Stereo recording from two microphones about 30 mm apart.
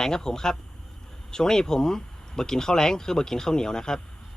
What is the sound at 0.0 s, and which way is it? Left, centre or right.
A man's voice, left.